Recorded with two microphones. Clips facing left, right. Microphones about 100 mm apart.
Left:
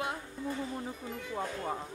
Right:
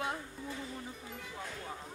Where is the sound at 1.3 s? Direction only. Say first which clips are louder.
Left 10 dB; 45° left (ahead or behind).